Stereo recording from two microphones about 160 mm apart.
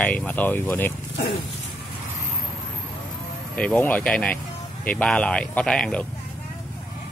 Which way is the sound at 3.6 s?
10° left (ahead or behind).